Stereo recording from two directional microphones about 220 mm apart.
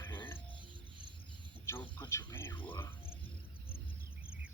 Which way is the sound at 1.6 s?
10° left (ahead or behind).